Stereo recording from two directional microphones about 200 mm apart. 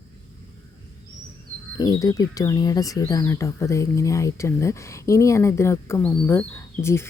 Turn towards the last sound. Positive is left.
turn(degrees=10)  # may be behind; listen again after turning